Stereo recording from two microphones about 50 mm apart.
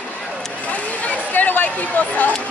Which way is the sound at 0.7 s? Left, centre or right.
Left.